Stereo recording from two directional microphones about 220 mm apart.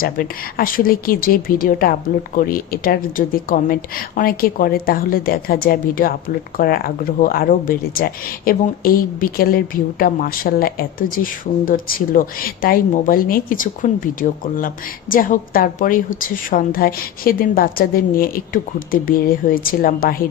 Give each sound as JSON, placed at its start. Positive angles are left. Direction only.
{"t": 0.0, "sound": "speech", "side_deg": 40}